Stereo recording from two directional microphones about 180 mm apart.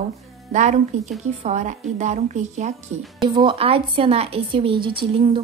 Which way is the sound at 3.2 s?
25° right (ahead or behind).